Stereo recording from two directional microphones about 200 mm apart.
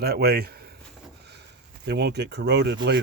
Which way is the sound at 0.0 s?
50° right (ahead or behind).